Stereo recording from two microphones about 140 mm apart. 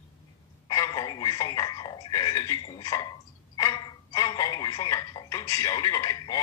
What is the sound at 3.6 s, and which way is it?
Telephone, 25° left (ahead or behind).